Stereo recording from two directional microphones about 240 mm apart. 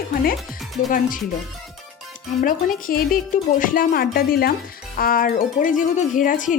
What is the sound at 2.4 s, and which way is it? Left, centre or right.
Speech, left.